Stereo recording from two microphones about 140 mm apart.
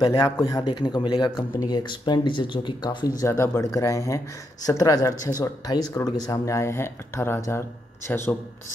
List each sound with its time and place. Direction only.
0.0 s speech: 30° left (ahead or behind)
3.2 s a man's voice: 20° left (ahead or behind)